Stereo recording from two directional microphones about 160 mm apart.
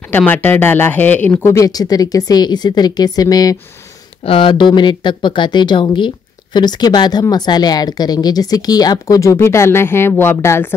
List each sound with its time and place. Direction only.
0.1 s speech: 10° left (ahead or behind)
4.2 s speech: 35° left (ahead or behind); by 10.7 s 15° left (ahead or behind)